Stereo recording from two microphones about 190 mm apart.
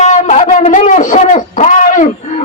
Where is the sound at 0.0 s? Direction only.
40° left (ahead or behind).